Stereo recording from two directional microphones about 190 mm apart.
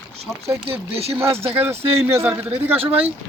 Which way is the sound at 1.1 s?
10° right (ahead or behind).